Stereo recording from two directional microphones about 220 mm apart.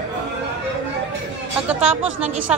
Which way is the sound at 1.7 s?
5° right (ahead or behind).